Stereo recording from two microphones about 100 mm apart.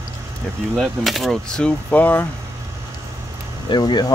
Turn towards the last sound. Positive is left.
turn(degrees=45)  # may be behind; listen again after turning